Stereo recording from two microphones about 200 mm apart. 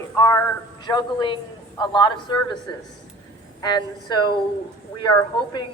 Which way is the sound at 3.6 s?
20° left (ahead or behind).